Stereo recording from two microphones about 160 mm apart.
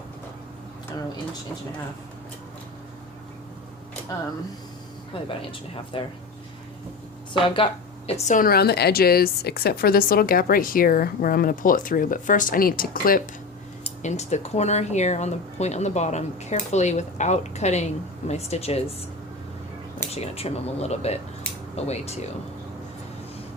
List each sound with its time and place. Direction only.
5.5 s speech: 35° left (ahead or behind)
7.4 s speech: 35° left (ahead or behind); by 13.2 s 65° left (ahead or behind)
13.8 s speech: 45° left (ahead or behind)
20.1 s speech: 40° left (ahead or behind)